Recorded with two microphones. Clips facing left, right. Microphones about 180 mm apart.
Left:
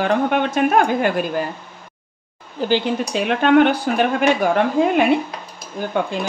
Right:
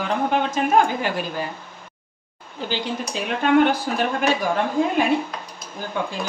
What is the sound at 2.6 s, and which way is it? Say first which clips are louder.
Speech: left 8 dB; 65° left (ahead or behind).